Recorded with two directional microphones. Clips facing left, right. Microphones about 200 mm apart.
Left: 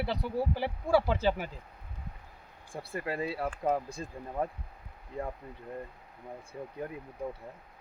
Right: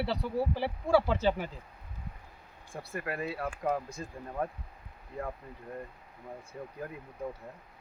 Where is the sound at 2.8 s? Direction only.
30° left (ahead or behind).